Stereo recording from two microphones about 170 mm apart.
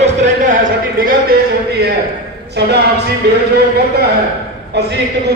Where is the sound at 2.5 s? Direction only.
80° right.